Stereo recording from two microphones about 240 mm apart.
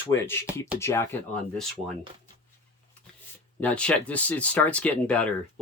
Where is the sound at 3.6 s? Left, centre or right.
Centre.